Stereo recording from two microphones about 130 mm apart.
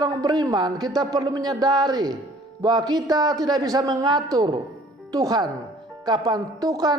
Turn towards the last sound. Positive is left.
turn(degrees=-30)  # may be behind; listen again after turning